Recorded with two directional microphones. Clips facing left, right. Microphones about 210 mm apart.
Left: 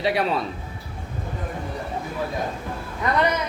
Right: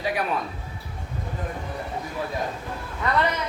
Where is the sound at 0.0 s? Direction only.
25° left (ahead or behind).